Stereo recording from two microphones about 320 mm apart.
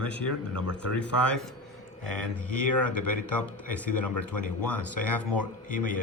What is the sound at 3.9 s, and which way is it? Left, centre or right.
Speech, left.